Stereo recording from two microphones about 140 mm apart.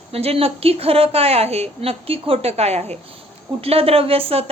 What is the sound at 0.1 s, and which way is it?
A woman's voice, 45° right (ahead or behind).